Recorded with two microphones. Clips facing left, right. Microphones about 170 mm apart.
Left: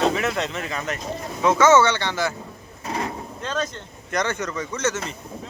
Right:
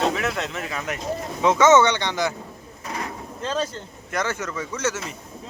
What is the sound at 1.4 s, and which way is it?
Speech, 20° right (ahead or behind).